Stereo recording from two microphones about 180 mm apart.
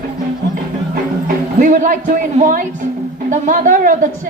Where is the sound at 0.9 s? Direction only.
50° right (ahead or behind).